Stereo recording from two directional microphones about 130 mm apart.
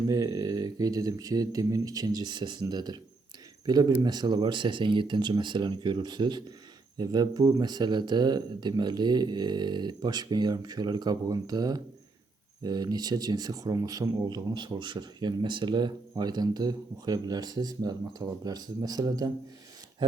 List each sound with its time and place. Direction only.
0.1 s speech: 25° right (ahead or behind)